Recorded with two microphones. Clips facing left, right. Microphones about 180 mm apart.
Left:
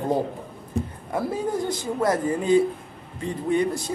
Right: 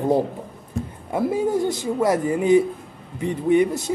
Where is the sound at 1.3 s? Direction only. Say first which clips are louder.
Right 5 dB; 20° right (ahead or behind).